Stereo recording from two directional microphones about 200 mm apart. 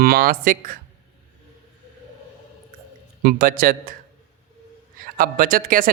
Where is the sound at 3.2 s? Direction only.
45° right (ahead or behind).